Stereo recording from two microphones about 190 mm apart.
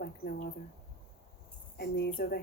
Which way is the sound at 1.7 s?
60° left (ahead or behind).